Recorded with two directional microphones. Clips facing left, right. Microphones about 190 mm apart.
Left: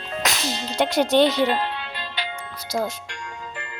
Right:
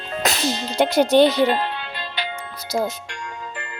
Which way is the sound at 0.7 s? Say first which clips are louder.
Right 3 dB; 5° right (ahead or behind).